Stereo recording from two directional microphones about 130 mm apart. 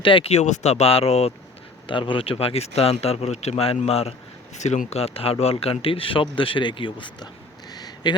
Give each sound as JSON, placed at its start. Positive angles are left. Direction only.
{"t": 0.0, "sound": "speech", "side_deg": 45}
{"t": 1.9, "sound": "speech", "side_deg": 40}
{"t": 4.5, "sound": "speech", "side_deg": 65}
{"t": 7.7, "sound": "a sound", "side_deg": 30}